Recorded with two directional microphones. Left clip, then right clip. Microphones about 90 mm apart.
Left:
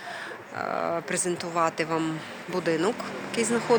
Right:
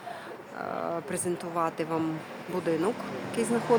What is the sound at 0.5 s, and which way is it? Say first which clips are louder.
Speech: left 4 dB; 15° left (ahead or behind).